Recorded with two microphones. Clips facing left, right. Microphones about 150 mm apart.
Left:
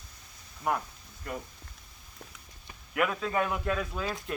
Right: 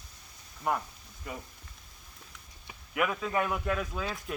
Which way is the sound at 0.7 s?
Centre (ahead or behind).